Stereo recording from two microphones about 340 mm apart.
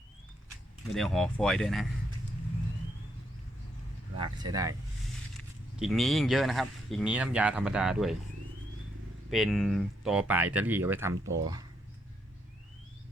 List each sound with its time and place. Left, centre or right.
0.9 s speech: centre
4.2 s speech: centre
5.7 s speech: centre
9.3 s speech: centre